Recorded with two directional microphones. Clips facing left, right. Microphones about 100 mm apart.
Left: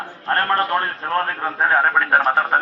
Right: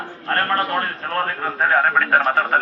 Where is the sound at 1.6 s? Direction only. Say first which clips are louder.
Even; 15° left (ahead or behind).